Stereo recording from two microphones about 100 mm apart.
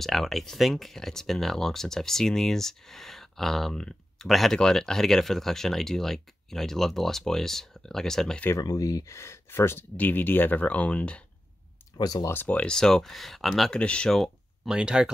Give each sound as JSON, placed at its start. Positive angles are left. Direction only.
{"t": 0.0, "sound": "speech", "side_deg": 0}
{"t": 8.5, "sound": "speech", "side_deg": 35}
{"t": 12.0, "sound": "speech", "side_deg": 40}
{"t": 12.3, "sound": "speech", "side_deg": 15}
{"t": 14.7, "sound": "speech", "side_deg": -10}